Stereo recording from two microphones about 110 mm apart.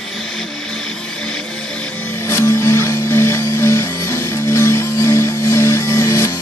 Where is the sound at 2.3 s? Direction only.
25° left (ahead or behind).